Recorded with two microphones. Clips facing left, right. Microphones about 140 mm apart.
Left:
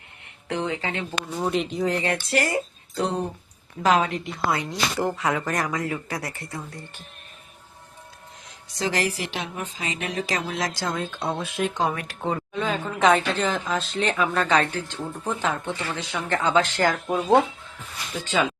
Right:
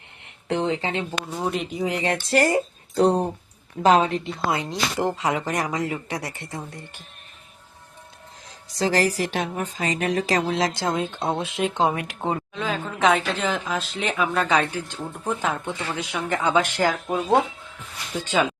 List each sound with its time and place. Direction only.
0.4 s speech: 30° right (ahead or behind)
1.4 s a woman's voice: centre (ahead or behind)
1.9 s speech: 20° right (ahead or behind)
2.5 s speech: 30° right (ahead or behind)
8.7 s speech: 35° right (ahead or behind); by 12.4 s 20° right (ahead or behind)
12.5 s a woman's voice: centre (ahead or behind)